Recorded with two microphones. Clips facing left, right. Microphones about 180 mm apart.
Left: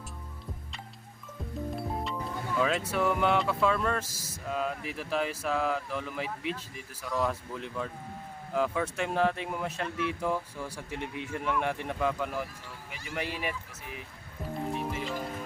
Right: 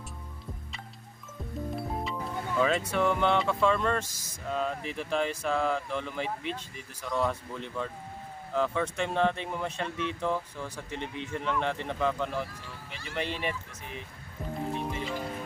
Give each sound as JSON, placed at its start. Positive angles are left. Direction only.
{"t": 1.7, "sound": "speech", "side_deg": 0}
{"t": 14.7, "sound": "music", "side_deg": 5}